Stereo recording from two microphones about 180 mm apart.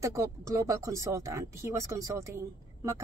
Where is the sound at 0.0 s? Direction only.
15° right (ahead or behind).